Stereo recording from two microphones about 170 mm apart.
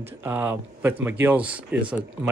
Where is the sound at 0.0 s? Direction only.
10° right (ahead or behind).